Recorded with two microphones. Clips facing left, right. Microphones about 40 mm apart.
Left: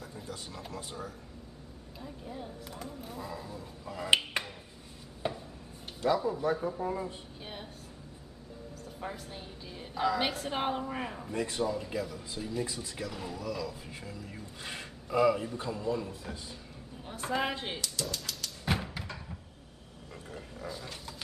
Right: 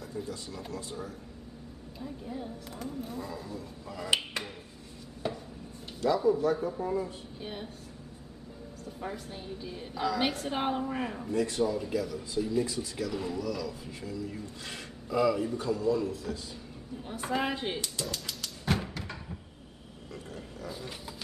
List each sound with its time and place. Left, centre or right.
0.1 s a man's voice: left
2.0 s speech: centre
4.4 s a sound: left
6.1 s speech: centre
9.0 s speech: centre
11.3 s a man's voice: centre
11.6 s speech: centre
11.9 s speech: centre
13.4 s a man's voice: centre
17.0 s speech: centre
17.7 s speech: right
18.0 s dog: centre
18.7 s thump: centre